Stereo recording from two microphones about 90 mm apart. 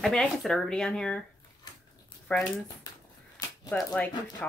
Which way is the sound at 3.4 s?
45° left (ahead or behind).